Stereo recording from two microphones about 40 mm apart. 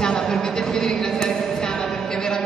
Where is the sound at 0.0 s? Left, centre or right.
Centre.